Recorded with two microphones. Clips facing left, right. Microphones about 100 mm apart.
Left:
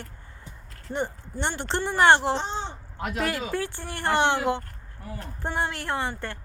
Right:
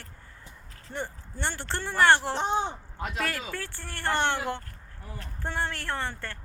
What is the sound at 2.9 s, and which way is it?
Speech, 15° left (ahead or behind).